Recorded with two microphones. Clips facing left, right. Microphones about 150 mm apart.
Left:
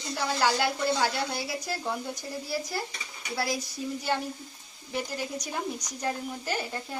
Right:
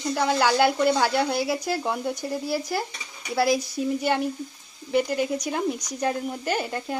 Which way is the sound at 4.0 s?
65° right (ahead or behind).